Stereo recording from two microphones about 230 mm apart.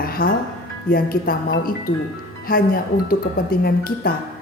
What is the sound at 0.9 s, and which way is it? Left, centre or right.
A woman's voice, left.